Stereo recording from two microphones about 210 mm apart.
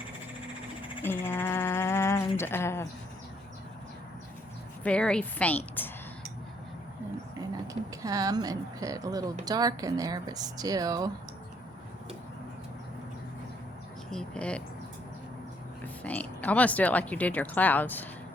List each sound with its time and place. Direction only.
1.0 s a sound: 10° left (ahead or behind)
4.8 s speech: 5° left (ahead or behind)
7.7 s speech: 15° right (ahead or behind)
14.1 s speech: 5° left (ahead or behind)
15.8 s speech: 5° left (ahead or behind)